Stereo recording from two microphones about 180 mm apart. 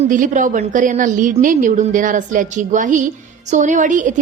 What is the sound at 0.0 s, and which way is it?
A woman's voice, 45° right (ahead or behind).